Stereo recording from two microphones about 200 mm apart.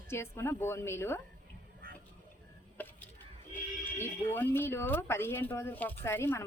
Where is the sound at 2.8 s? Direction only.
10° left (ahead or behind).